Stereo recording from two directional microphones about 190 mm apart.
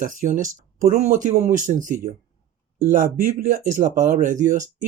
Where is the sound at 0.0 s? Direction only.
45° right (ahead or behind).